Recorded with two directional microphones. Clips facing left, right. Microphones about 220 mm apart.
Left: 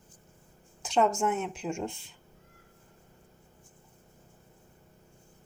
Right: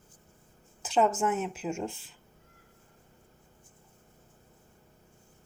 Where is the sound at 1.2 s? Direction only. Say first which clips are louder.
Even; 5° right (ahead or behind).